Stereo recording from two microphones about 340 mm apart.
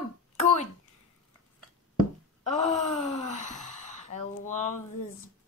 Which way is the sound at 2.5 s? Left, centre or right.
Centre.